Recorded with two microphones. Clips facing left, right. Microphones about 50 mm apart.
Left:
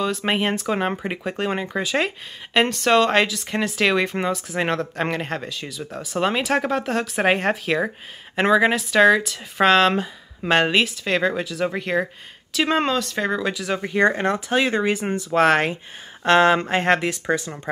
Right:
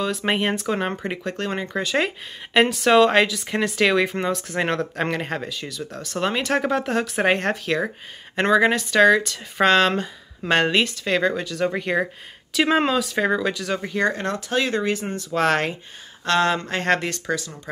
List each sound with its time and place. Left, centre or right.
0.0 s speech: centre
13.9 s speech: left
16.3 s speech: left